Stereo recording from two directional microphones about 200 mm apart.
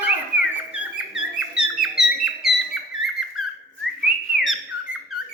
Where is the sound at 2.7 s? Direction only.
Centre (ahead or behind).